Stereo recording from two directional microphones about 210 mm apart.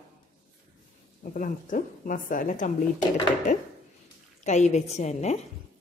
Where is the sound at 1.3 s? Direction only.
40° left (ahead or behind).